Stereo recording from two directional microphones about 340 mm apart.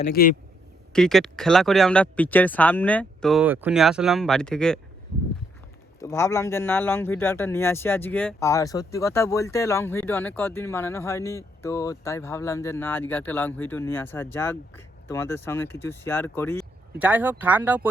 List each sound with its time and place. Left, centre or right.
0.0 s speech: left
0.9 s speech: centre
6.0 s a man's voice: centre
17.0 s speech: centre